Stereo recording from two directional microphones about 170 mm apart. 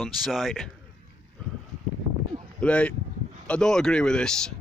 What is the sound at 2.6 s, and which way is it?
Speech, 5° left (ahead or behind).